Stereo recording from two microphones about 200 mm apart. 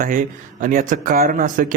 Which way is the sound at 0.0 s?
40° right (ahead or behind).